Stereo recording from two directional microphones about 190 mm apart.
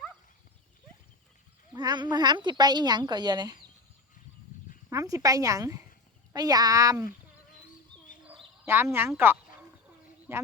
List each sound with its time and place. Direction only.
1.7 s speech: 20° right (ahead or behind)
4.9 s a woman's voice: 15° right (ahead or behind)
8.6 s a woman's voice: 10° right (ahead or behind)